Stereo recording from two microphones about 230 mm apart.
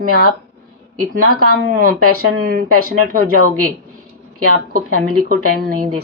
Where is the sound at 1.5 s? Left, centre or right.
Right.